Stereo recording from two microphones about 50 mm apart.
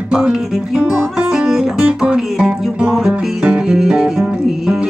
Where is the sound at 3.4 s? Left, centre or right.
Right.